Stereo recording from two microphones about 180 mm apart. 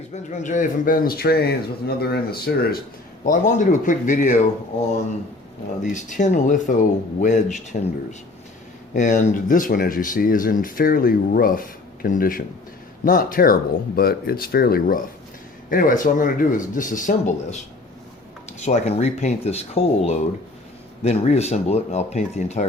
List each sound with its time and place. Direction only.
0.1 s speech: 45° left (ahead or behind); by 2.8 s 60° left (ahead or behind)
3.2 s speech: 45° left (ahead or behind)
5.8 s speech: 45° left (ahead or behind)
8.9 s speech: 45° left (ahead or behind)
21.0 s speech: 35° left (ahead or behind)